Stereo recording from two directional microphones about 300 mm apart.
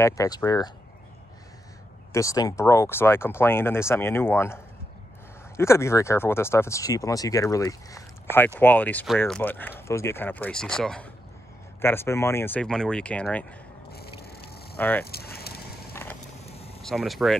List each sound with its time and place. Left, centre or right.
0.0 s speech: centre
2.1 s speech: centre
5.6 s speech: centre
14.2 s a sound: left
14.8 s speech: centre
15.0 s a sound: left
15.9 s vehicle: centre
16.4 s vehicle: centre
16.8 s speech: centre